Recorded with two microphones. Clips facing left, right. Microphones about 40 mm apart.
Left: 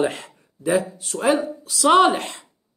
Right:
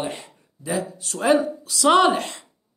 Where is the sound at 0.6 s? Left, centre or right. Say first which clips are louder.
Left 6 dB; left.